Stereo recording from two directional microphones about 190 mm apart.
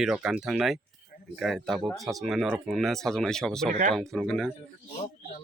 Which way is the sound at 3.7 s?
40° right (ahead or behind).